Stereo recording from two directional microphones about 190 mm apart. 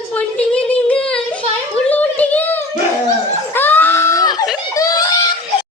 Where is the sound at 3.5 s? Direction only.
10° left (ahead or behind).